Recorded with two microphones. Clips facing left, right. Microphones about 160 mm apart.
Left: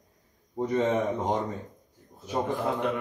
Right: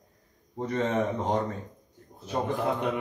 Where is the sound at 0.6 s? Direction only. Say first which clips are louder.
Left 2 dB; 15° left (ahead or behind).